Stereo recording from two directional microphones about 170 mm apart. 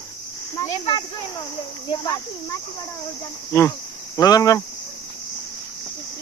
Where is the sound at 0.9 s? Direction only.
25° left (ahead or behind).